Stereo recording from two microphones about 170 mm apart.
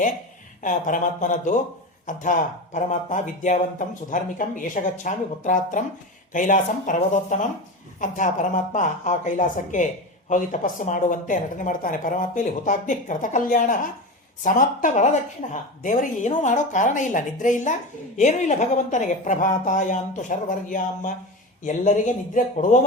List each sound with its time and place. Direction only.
0.6 s speech: 50° left (ahead or behind)